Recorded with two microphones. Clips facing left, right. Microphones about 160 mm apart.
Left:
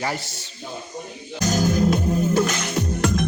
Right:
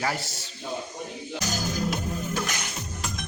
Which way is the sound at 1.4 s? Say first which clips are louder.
Left 10 dB; 55° left (ahead or behind).